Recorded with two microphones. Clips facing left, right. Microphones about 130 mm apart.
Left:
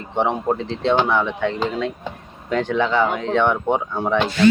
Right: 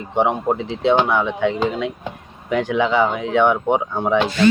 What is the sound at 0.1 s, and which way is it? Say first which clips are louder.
Speech: right 2 dB; 10° right (ahead or behind).